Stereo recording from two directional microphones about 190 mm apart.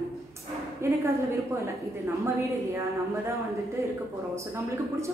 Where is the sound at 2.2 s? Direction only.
15° right (ahead or behind).